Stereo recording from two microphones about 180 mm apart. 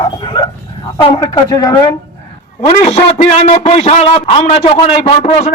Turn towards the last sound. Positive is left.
turn(degrees=35)  # may be behind; listen again after turning